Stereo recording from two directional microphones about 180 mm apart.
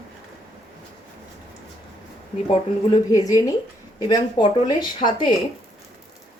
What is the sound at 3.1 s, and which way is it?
Speech, 20° left (ahead or behind).